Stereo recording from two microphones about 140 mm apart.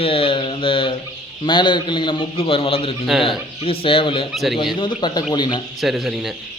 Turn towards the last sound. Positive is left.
turn(degrees=0)  # may be behind; listen again after turning